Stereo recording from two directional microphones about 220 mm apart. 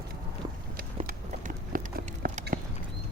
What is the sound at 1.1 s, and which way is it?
Clip-clop, 40° right (ahead or behind).